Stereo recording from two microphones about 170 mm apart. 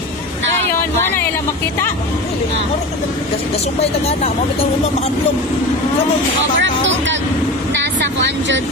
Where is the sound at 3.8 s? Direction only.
40° left (ahead or behind).